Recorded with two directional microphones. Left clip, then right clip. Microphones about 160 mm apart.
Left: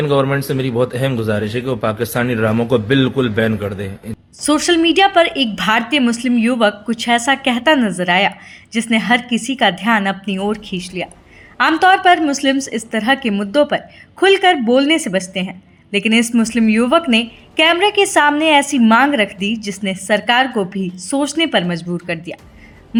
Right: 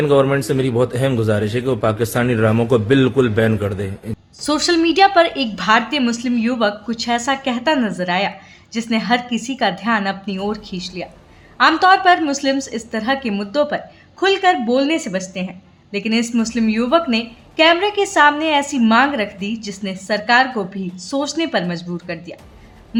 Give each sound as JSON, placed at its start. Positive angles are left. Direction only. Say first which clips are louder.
{"t": 0.0, "sound": "a man's voice", "louder": "right 1 dB", "side_deg": -10}
{"t": 4.4, "sound": "a woman's voice", "louder": "left 3 dB", "side_deg": 10}